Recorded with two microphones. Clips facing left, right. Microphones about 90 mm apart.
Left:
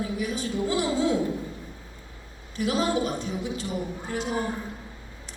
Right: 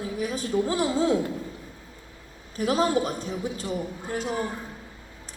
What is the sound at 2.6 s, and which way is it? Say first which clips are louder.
A woman's voice: right 2 dB; 40° right (ahead or behind).